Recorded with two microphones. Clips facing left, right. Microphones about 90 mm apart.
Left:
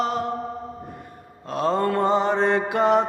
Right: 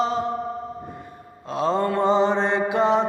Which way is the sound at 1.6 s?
50° left (ahead or behind).